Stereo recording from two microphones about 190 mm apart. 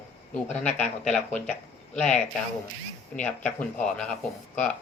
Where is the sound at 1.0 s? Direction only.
5° left (ahead or behind).